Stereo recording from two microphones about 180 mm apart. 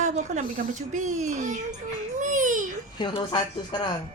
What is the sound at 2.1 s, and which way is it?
Babbling, 45° right (ahead or behind).